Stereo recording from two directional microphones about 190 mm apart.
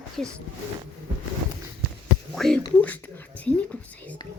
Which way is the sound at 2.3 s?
Centre (ahead or behind).